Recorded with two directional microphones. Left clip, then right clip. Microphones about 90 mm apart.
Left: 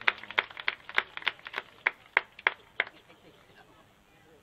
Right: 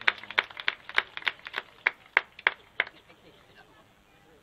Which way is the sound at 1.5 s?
30° left (ahead or behind).